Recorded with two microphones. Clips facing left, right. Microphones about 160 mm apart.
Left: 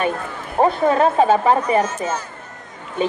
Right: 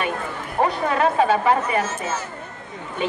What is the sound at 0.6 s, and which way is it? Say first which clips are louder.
Speech: left 5 dB; 40° left (ahead or behind).